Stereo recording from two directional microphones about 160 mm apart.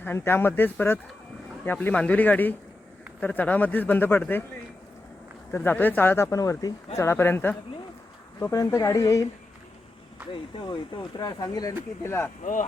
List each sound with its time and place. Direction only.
0.0 s speech: 15° left (ahead or behind)
5.5 s speech: 10° left (ahead or behind)
10.3 s speech: 30° left (ahead or behind); by 12.3 s 15° left (ahead or behind)